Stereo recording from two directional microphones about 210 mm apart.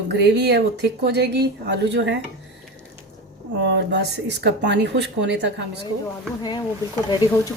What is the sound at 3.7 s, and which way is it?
Speech, 55° right (ahead or behind).